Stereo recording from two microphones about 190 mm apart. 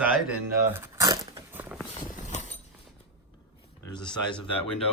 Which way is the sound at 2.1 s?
40° left (ahead or behind).